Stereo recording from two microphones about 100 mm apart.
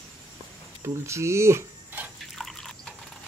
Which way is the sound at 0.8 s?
30° right (ahead or behind).